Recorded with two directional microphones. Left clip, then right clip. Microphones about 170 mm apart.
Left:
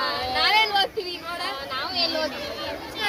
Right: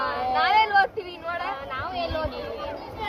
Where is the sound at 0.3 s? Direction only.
15° left (ahead or behind).